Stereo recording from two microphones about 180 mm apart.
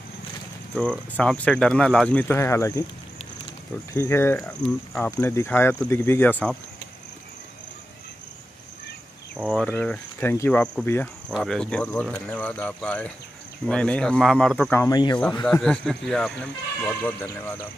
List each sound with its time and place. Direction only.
0.7 s speech: 5° left (ahead or behind)
3.9 s speech: 15° left (ahead or behind)
9.4 s speech: centre (ahead or behind)
11.2 s speech: centre (ahead or behind)